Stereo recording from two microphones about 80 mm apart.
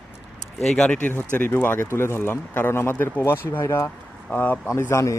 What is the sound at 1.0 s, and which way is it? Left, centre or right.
Speech, left.